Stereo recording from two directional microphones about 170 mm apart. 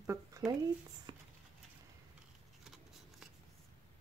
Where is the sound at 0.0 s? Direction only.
15° right (ahead or behind).